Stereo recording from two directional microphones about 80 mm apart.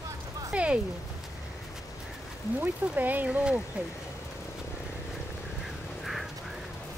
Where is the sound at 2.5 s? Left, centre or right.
Right.